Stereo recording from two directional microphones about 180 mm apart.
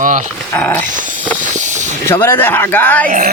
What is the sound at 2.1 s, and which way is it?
Speech, 10° left (ahead or behind).